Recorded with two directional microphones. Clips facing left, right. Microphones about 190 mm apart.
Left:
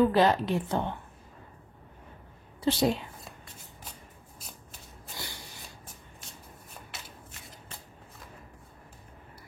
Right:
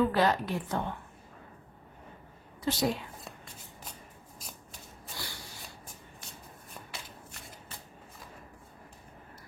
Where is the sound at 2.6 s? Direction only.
30° left (ahead or behind).